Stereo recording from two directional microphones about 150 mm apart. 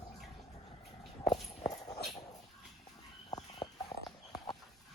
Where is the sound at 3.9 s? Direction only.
40° left (ahead or behind).